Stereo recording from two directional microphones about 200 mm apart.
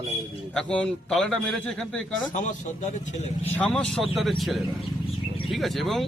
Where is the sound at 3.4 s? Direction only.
5° left (ahead or behind).